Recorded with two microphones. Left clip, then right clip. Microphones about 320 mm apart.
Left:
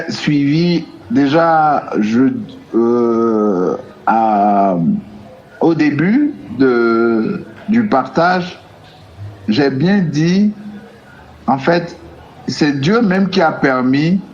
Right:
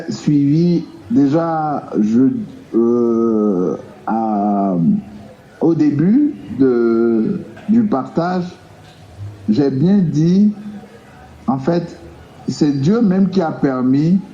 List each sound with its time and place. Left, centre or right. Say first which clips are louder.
0.2 s a man's voice: even; left
9.5 s a man's voice: left 2 dB; left
11.4 s a man's voice: left 5 dB; left